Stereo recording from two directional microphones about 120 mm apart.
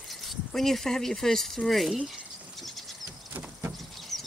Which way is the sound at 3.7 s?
Centre (ahead or behind).